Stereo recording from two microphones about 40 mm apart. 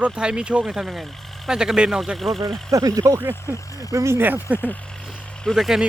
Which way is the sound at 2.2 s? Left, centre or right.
Centre.